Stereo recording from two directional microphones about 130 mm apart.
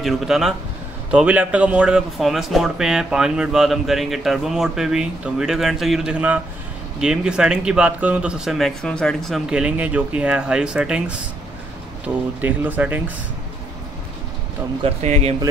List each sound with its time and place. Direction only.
0.0 s speech: centre (ahead or behind)
14.8 s speech: 50° right (ahead or behind)